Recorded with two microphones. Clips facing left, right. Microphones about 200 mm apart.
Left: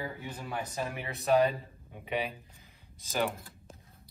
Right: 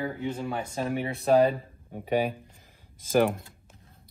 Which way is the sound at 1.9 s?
45° right (ahead or behind).